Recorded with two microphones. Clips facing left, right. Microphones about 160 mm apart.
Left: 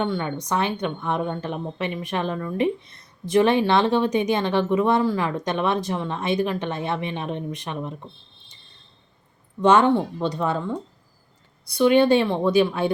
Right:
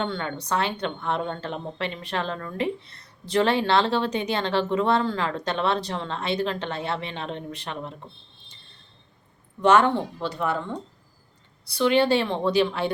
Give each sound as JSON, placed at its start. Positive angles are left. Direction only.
{"t": 0.0, "sound": "a woman's voice", "side_deg": 15}
{"t": 9.6, "sound": "a woman's voice", "side_deg": 15}
{"t": 11.8, "sound": "a woman's voice", "side_deg": 15}